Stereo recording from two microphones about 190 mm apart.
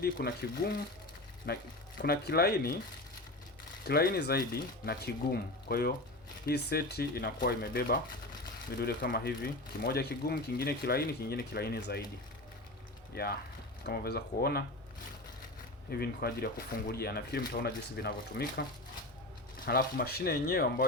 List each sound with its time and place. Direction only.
0.0 s speech: 55° left (ahead or behind)
1.5 s speech: 60° left (ahead or behind)
3.8 s speech: 55° left (ahead or behind)
13.1 s speech: 55° left (ahead or behind)
15.9 s speech: 55° left (ahead or behind)
19.6 s speech: 55° left (ahead or behind)